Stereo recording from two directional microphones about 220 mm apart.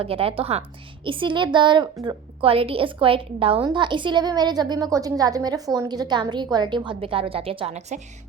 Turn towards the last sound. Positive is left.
turn(degrees=-30)  # may be behind; listen again after turning